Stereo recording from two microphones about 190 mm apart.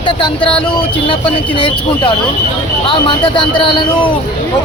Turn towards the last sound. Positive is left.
turn(degrees=25)  # may be behind; listen again after turning